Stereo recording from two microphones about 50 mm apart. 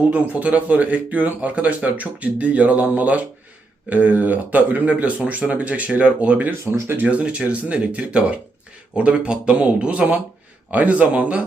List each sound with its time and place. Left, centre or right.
0.1 s speech: right